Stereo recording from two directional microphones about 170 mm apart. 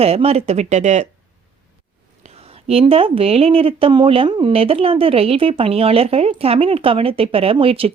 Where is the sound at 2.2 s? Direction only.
35° right (ahead or behind).